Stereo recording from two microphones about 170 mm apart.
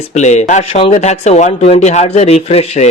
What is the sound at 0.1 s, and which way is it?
A man's voice, 45° left (ahead or behind).